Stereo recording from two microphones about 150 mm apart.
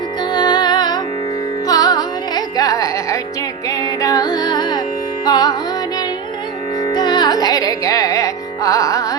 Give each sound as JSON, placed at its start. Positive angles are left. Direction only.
{"t": 0.3, "sound": "music", "side_deg": 30}
{"t": 6.8, "sound": "carnatic music", "side_deg": 30}